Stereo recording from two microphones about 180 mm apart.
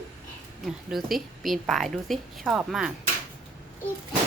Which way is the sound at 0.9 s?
Centre (ahead or behind).